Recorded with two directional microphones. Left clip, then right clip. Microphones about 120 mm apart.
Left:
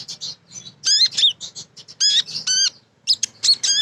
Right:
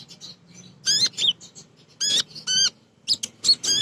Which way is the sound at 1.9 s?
45° left (ahead or behind).